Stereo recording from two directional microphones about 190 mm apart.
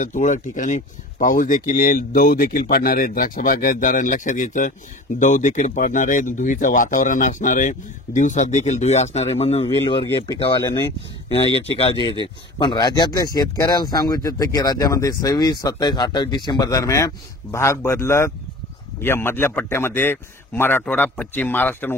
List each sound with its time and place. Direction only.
0.0 s a man's voice: 40° left (ahead or behind); by 21.9 s 10° left (ahead or behind)